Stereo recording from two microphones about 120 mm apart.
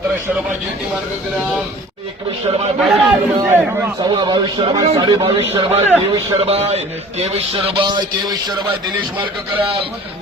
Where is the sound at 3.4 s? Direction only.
20° right (ahead or behind).